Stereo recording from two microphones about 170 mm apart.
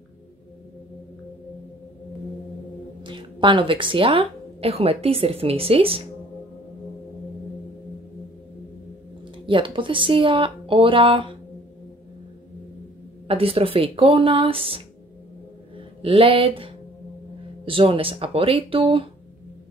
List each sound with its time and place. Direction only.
3.0 s a woman's voice: 30° right (ahead or behind)
9.5 s speech: 30° right (ahead or behind)
13.3 s speech: 35° right (ahead or behind)
16.0 s speech: 35° right (ahead or behind)